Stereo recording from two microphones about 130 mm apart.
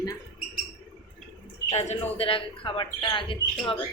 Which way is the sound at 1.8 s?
50° left (ahead or behind).